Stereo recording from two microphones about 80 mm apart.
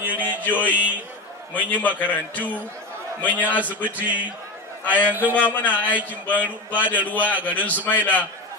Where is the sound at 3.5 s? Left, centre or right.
Centre.